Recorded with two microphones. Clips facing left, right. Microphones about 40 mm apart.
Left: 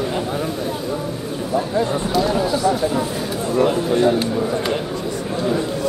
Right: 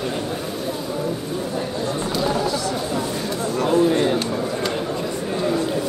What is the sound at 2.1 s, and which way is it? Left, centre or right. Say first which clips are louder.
Run: left 4 dB; centre.